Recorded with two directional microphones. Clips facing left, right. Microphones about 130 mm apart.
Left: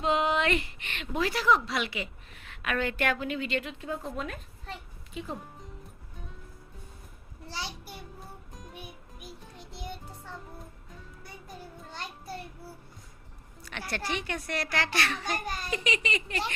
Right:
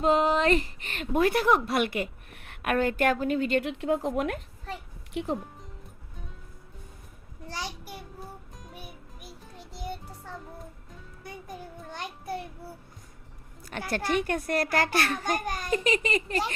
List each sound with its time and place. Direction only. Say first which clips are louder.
0.0 s a woman's voice: right 4 dB; 40° right (ahead or behind)
3.6 s speech: right 9 dB; 75° right (ahead or behind)
7.4 s a child's voice: right 2 dB; 45° right (ahead or behind)
7.9 s music: right 3 dB; centre (ahead or behind)
9.7 s music: right 4 dB; 45° right (ahead or behind)
11.3 s child singing: right 5 dB; 50° right (ahead or behind)
13.7 s a woman's voice: right 5 dB; 45° right (ahead or behind)